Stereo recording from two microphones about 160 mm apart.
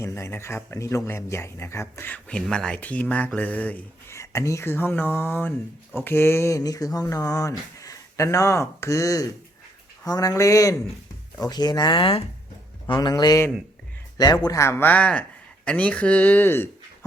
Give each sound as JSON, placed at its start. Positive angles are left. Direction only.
{"t": 0.0, "sound": "speech", "side_deg": 15}